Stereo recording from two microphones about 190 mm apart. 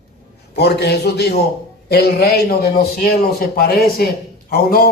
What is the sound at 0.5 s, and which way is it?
A man's voice, 60° left (ahead or behind).